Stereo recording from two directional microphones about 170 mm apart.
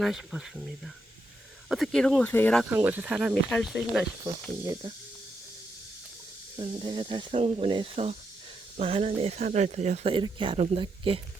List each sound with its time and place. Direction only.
0.0 s speech: 5° right (ahead or behind)
1.7 s speech: centre (ahead or behind)
2.6 s speech: 10° right (ahead or behind)
4.6 s speech: 20° right (ahead or behind)
6.6 s speech: 30° right (ahead or behind)